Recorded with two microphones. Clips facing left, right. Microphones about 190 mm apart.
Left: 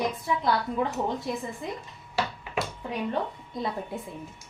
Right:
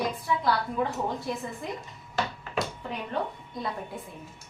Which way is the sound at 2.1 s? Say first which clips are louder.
Even; 10° left (ahead or behind).